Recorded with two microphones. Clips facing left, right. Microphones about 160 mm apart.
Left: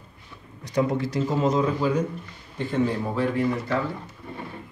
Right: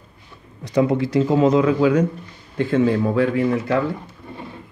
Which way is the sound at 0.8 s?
90° right.